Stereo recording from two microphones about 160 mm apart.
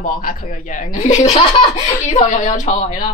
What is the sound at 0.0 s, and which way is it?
Speech, 60° left (ahead or behind).